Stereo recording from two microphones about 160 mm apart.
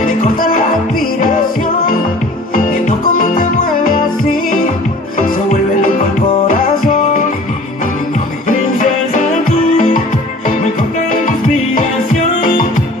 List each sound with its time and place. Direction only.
0.4 s music: 60° left (ahead or behind)
2.5 s music: 60° left (ahead or behind)
5.1 s music: 60° left (ahead or behind)
8.5 s music: 55° left (ahead or behind)